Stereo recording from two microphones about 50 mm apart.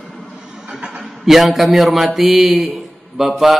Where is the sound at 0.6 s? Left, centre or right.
Centre.